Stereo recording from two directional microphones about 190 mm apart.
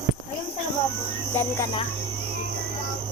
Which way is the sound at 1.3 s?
15° left (ahead or behind).